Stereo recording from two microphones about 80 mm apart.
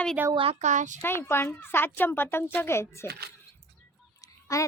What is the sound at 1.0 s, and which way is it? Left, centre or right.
Speech, left.